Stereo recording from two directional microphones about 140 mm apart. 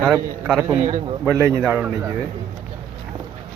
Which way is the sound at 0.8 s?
40° right (ahead or behind).